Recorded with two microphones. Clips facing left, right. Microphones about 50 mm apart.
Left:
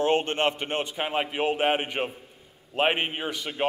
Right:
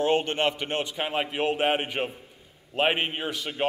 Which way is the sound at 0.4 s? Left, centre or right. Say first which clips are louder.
Even; left.